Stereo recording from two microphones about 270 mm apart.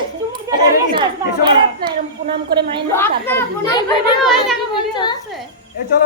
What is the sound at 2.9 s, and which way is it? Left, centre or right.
Speech, centre.